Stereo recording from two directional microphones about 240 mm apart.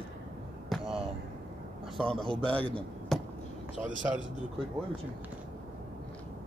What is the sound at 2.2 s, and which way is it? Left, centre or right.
Speech, right.